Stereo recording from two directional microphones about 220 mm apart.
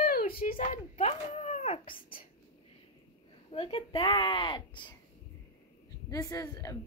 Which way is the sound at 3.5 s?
25° left (ahead or behind).